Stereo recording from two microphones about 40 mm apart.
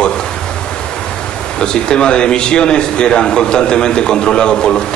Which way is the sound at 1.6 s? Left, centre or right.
Left.